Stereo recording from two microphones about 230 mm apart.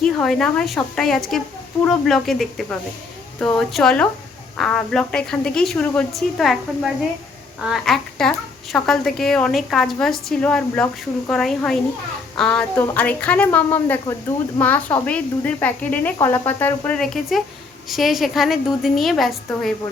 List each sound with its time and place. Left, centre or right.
0.0 s a woman's voice: centre